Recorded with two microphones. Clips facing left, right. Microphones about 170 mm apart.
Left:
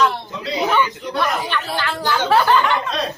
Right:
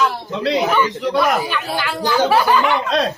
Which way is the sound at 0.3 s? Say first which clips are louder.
Right 7 dB; 70° right (ahead or behind).